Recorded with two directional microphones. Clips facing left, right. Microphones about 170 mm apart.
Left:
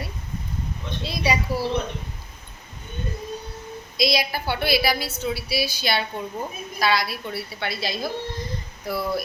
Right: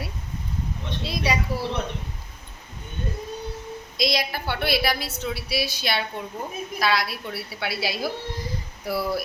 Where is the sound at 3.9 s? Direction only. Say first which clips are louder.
Left 2 dB; 5° left (ahead or behind).